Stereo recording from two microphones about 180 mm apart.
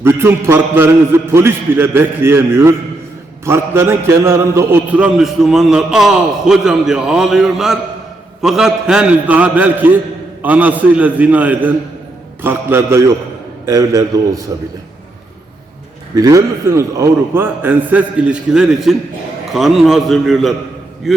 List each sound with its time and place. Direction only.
0.0 s a man's voice: 15° right (ahead or behind)
16.1 s a man's voice: 20° right (ahead or behind); by 21.2 s centre (ahead or behind)